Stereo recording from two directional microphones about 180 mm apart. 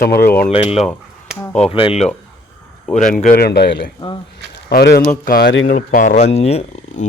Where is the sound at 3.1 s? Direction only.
50° left (ahead or behind).